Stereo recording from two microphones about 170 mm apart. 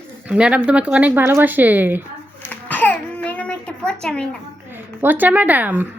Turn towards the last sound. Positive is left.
turn(degrees=-10)  # may be behind; listen again after turning